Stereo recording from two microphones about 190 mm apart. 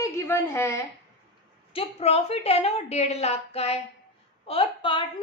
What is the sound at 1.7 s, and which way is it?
A woman's voice, 35° left (ahead or behind).